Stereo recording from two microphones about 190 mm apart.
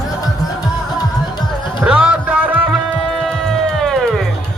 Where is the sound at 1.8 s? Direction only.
5° right (ahead or behind).